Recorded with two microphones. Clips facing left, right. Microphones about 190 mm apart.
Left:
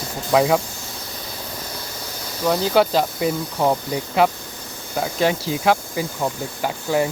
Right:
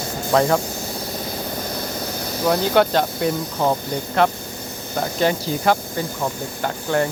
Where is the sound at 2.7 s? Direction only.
5° left (ahead or behind).